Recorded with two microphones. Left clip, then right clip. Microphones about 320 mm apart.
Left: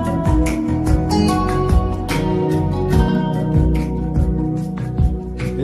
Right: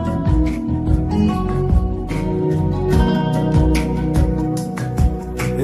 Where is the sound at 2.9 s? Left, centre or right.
Centre.